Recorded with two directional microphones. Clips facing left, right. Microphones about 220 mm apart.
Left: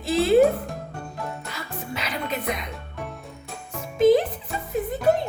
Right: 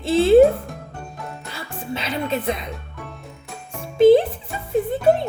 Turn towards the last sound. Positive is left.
turn(degrees=-25)  # may be behind; listen again after turning